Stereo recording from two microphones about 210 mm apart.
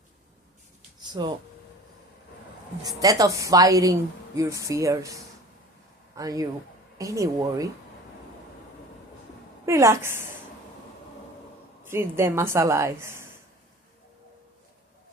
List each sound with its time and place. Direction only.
1.0 s speech: 20° right (ahead or behind)
2.8 s a woman's voice: 15° right (ahead or behind)
9.6 s a woman's voice: 15° right (ahead or behind)
11.9 s a woman's voice: 10° right (ahead or behind)